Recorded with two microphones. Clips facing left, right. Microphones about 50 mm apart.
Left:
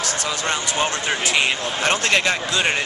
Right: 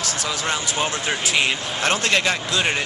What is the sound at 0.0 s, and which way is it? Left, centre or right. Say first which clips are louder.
Speech: left 1 dB; centre.